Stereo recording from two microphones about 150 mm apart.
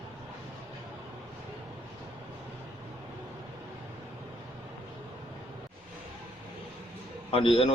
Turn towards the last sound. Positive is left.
turn(degrees=35)  # may be behind; listen again after turning